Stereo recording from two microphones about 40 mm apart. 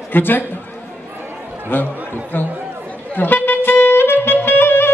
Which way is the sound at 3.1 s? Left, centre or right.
Left.